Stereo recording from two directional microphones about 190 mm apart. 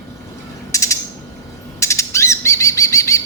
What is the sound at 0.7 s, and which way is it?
Mechanisms, 15° left (ahead or behind).